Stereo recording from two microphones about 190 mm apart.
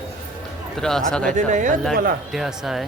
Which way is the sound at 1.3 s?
40° right (ahead or behind).